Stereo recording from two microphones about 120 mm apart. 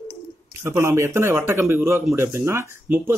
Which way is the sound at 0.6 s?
20° right (ahead or behind).